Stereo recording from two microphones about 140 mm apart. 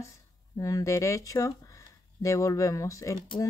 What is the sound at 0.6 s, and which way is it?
Speech, 25° left (ahead or behind).